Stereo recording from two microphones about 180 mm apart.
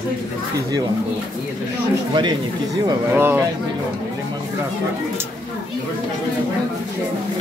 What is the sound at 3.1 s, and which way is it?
Speech, 10° right (ahead or behind).